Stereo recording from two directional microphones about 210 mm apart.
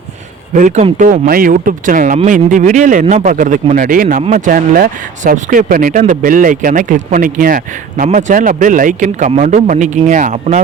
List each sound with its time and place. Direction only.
0.5 s speech: 35° right (ahead or behind)